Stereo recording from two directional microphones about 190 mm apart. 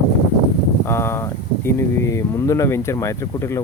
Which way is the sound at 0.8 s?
15° left (ahead or behind).